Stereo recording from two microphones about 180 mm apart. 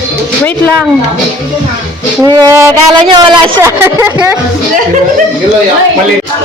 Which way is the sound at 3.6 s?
15° right (ahead or behind).